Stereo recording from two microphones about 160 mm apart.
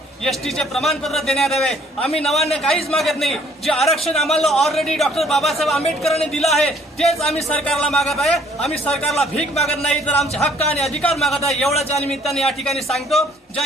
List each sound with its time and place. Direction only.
0.3 s speech: centre (ahead or behind)